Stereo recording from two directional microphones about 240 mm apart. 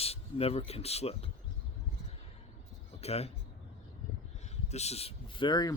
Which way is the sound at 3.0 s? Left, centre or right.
Left.